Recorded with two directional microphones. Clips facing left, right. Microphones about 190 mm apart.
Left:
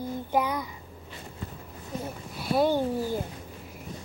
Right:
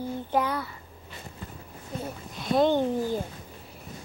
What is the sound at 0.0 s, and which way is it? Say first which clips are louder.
Child singing: even; 10° left (ahead or behind).